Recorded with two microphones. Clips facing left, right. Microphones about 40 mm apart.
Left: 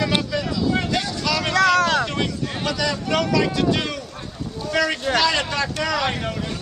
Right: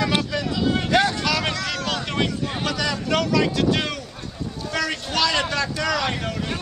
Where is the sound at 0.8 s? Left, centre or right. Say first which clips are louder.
Right 5 dB; right.